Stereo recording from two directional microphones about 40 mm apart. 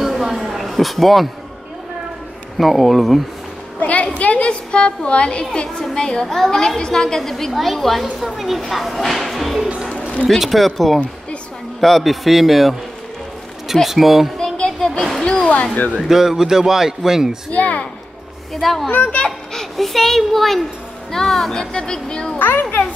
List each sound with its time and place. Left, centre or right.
0.0 s a sound: centre
2.5 s speech: centre
3.8 s a woman's voice: left; by 6.2 s centre
6.2 s speech: centre
6.8 s a woman's voice: centre
13.8 s speech: centre
14.4 s a sound: centre
15.2 s a sound: left
16.1 s a man's voice: centre
17.5 s speech: left
18.5 s speech: centre
19.0 s a child's voice: left
19.5 s a child's voice: centre
22.4 s a child's voice: left